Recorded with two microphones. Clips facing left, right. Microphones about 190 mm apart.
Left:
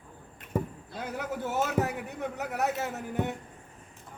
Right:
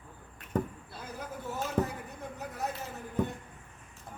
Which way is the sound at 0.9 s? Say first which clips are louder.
Left 8 dB; 75° left (ahead or behind).